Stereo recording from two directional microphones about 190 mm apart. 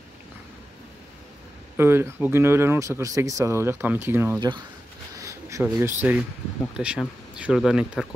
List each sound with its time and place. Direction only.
1.8 s speech: 10° right (ahead or behind)
4.4 s speech: 25° right (ahead or behind)
5.1 s a sound: 15° right (ahead or behind)
6.8 s speech: 5° right (ahead or behind)